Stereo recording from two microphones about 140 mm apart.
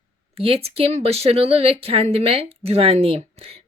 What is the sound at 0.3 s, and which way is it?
Speech, 45° right (ahead or behind).